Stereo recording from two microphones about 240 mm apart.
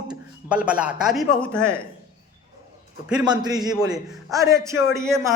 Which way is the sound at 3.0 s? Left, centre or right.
Centre.